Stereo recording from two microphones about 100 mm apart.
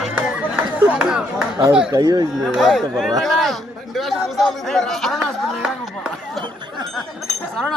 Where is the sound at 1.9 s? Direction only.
40° right (ahead or behind).